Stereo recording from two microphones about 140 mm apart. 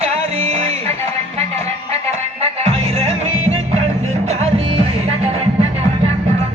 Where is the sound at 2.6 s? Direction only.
45° right (ahead or behind).